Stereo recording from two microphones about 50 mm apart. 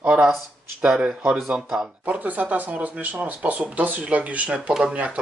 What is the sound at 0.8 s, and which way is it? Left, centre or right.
Speech, centre.